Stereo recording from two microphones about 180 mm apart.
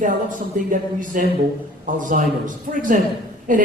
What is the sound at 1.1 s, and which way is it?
Speech, 50° right (ahead or behind).